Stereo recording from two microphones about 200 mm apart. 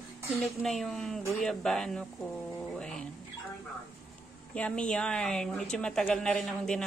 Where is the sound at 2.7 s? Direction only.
5° left (ahead or behind).